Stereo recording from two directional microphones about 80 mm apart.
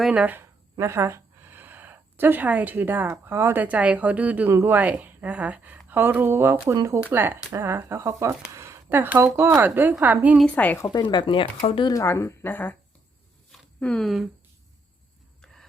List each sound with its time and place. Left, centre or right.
0.1 s speech: centre
0.3 s a woman's voice: right
8.5 s a sound: right
9.0 s a woman's voice: right
10.5 s speech: left
10.9 s speech: left
11.9 s speech: left
12.5 s speech: left
13.7 s speech: centre